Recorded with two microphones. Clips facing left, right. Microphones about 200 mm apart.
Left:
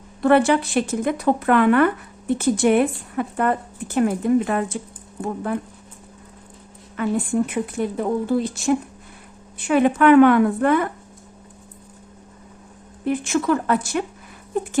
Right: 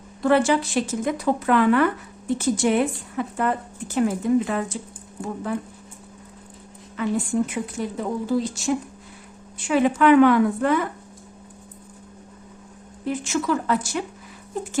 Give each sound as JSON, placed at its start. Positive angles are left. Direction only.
{"t": 0.2, "sound": "speech", "side_deg": 60}
{"t": 6.9, "sound": "speech", "side_deg": 55}
{"t": 13.1, "sound": "speech", "side_deg": 55}